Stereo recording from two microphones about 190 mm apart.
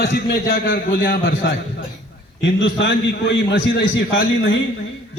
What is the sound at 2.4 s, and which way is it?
A man's voice, 70° left (ahead or behind).